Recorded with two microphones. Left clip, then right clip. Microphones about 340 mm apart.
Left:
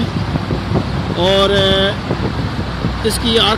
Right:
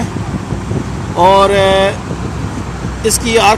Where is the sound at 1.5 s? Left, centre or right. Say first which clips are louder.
Right 4 dB; right.